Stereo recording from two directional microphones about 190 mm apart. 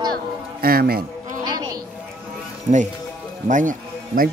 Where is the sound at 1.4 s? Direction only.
20° right (ahead or behind).